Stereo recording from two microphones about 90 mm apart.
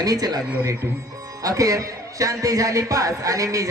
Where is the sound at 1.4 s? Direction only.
40° right (ahead or behind).